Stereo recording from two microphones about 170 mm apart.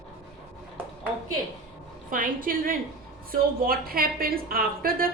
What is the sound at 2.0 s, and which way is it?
A woman's voice, 55° right (ahead or behind).